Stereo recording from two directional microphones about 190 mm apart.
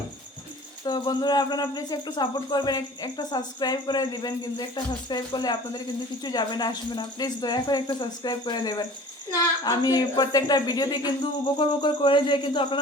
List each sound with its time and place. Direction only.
0.9 s cricket: 20° left (ahead or behind)